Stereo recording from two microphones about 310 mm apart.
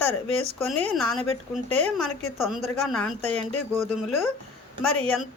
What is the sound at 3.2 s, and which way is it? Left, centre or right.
Speech, right.